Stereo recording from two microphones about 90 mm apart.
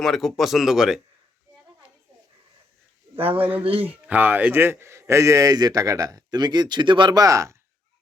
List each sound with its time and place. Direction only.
0.0 s speech: centre (ahead or behind)
3.2 s speech: 90° right
4.0 s a man's voice: 20° right (ahead or behind); by 7.2 s 60° right (ahead or behind)
7.2 s a man's voice: 35° right (ahead or behind)